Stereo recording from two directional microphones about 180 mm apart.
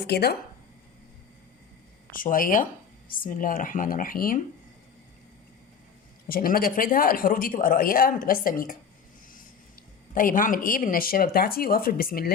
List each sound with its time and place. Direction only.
0.0 s speech: 60° left (ahead or behind)
2.0 s speech: 50° left (ahead or behind)
6.2 s speech: 55° left (ahead or behind)
10.2 s speech: 50° left (ahead or behind)